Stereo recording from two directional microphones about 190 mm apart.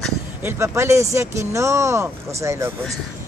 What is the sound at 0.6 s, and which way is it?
Speech, 15° right (ahead or behind).